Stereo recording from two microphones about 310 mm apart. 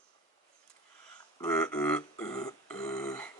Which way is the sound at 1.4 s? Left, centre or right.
Centre.